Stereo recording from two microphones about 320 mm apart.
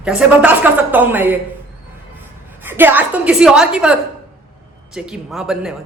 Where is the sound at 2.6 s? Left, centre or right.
Centre.